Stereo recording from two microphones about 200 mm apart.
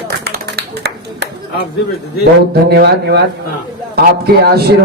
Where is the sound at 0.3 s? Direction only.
55° right (ahead or behind).